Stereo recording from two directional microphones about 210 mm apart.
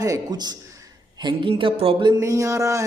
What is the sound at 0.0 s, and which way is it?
Speech, 15° right (ahead or behind).